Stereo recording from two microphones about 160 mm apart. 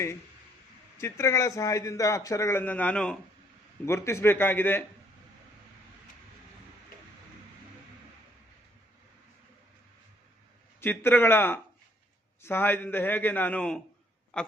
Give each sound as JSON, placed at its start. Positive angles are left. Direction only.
{"t": 0.9, "sound": "a man's voice", "side_deg": 15}
{"t": 3.8, "sound": "a man's voice", "side_deg": 15}
{"t": 10.8, "sound": "a man's voice", "side_deg": 15}